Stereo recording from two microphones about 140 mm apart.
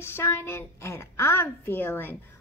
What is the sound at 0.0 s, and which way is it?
A woman's voice, 15° left (ahead or behind).